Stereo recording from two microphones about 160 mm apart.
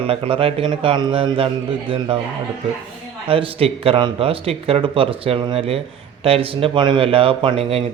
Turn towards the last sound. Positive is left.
turn(degrees=-35)  # may be behind; listen again after turning